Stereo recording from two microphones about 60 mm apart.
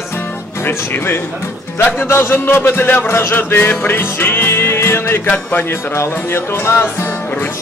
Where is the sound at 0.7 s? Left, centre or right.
Left.